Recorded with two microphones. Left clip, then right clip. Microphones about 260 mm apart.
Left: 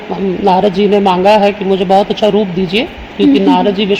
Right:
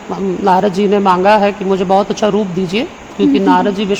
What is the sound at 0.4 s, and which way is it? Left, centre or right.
A man's voice, right.